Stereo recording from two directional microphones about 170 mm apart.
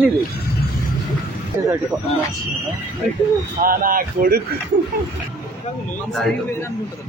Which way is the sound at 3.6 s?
55° right (ahead or behind).